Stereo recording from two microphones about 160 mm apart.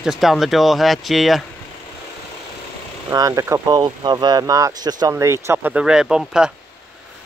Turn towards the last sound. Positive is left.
turn(degrees=-5)  # may be behind; listen again after turning